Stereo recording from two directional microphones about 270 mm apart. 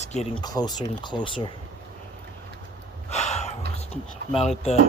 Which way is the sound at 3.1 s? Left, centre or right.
Left.